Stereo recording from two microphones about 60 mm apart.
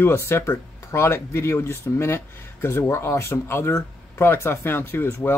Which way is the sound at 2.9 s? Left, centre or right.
Left.